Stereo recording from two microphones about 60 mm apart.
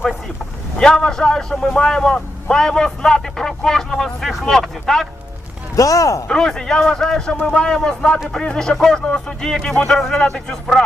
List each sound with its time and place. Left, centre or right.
0.8 s a man's voice: centre
5.7 s speech: left
6.2 s a man's voice: centre